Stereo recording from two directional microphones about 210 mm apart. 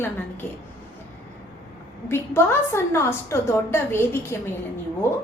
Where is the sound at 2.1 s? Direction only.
10° left (ahead or behind).